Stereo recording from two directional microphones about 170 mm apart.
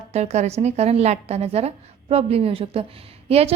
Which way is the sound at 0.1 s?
40° right (ahead or behind).